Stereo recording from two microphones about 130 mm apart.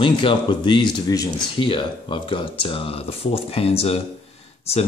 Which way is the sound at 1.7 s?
40° left (ahead or behind).